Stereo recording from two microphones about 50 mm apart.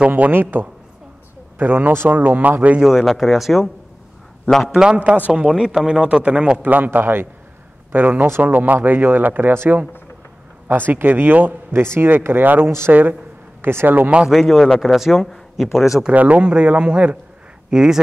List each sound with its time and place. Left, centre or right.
0.1 s speech: right
2.8 s a man's voice: centre
3.1 s speech: centre
4.9 s speech: right
5.3 s a man's voice: centre
6.7 s speech: right
10.7 s a man's voice: right
11.8 s a man's voice: right
14.3 s speech: centre
16.1 s a man's voice: right; by 18.0 s centre